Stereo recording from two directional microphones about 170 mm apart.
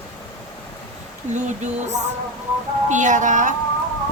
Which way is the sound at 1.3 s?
45° right (ahead or behind).